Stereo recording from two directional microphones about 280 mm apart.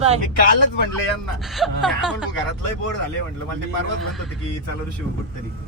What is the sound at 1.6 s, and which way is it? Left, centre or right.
Speech, centre.